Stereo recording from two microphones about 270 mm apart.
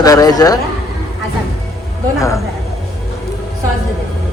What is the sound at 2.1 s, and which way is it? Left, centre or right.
Speech, centre.